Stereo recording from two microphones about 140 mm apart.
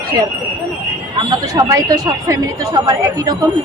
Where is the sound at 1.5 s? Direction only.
25° right (ahead or behind).